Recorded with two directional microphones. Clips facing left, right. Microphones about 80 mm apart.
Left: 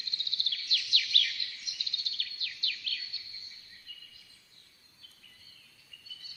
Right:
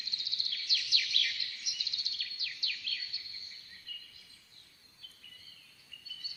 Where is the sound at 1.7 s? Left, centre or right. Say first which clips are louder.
Even; left.